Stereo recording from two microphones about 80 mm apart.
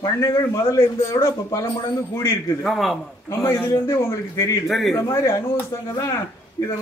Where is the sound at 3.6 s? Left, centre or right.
Left.